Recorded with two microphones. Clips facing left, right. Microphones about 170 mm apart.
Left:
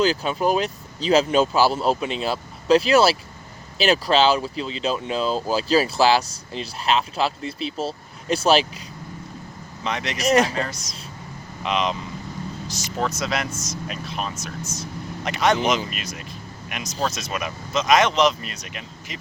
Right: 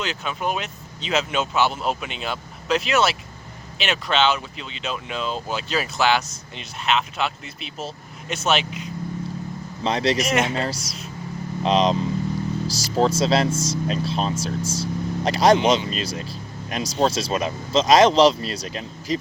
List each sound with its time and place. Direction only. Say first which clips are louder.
0.0 s speech: left 7 dB; 35° left (ahead or behind)
9.8 s speech: right 6 dB; 30° right (ahead or behind)
10.2 s speech: left 3 dB; 35° left (ahead or behind)
10.5 s speech: right 2 dB; 30° right (ahead or behind)